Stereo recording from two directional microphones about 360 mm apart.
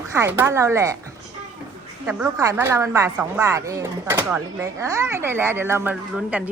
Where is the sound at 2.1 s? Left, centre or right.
Centre.